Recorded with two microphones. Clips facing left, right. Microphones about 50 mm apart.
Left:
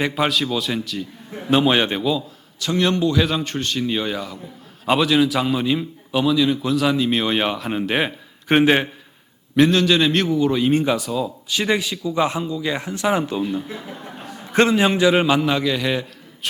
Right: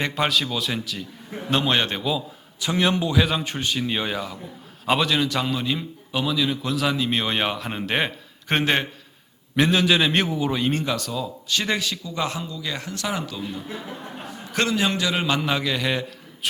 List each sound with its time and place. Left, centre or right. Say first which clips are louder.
0.0 s a man's voice: left 3 dB; centre
2.6 s a man's voice: left 3 dB; centre
9.6 s speech: left 4 dB; centre
10.8 s a man's voice: left 6 dB; centre
15.4 s a man's voice: left 4 dB; centre